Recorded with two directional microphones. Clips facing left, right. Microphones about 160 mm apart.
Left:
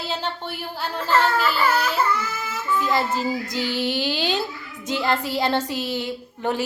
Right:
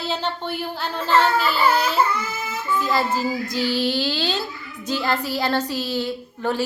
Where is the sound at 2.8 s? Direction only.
20° left (ahead or behind).